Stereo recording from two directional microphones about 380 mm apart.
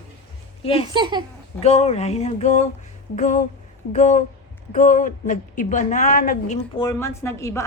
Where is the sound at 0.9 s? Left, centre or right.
Centre.